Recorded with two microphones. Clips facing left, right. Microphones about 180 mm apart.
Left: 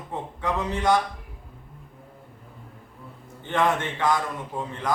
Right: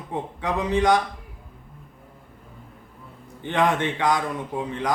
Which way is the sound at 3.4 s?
15° right (ahead or behind).